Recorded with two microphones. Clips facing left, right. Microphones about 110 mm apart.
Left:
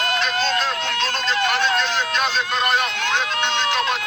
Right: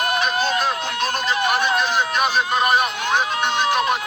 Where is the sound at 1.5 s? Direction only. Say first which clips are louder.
Right 1 dB; 15° right (ahead or behind).